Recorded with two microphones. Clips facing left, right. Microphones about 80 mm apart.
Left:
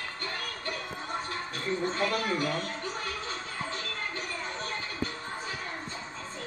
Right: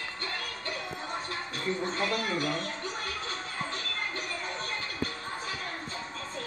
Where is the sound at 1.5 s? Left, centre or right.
Left.